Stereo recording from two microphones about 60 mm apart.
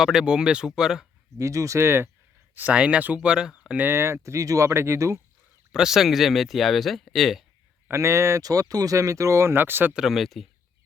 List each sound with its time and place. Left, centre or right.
0.0 s speech: centre
1.4 s speech: right
1.8 s speech: right
2.7 s speech: centre
3.2 s speech: centre
3.8 s speech: right
4.7 s speech: right
5.7 s speech: centre
7.9 s speech: right
8.4 s speech: right
9.9 s speech: centre